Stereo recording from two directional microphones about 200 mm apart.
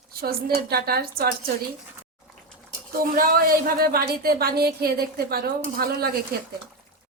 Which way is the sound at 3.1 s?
45° right (ahead or behind).